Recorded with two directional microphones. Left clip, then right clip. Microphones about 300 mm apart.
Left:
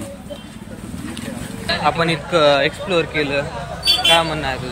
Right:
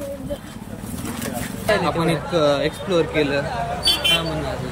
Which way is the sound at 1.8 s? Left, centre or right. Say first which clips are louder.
Left 4 dB; centre.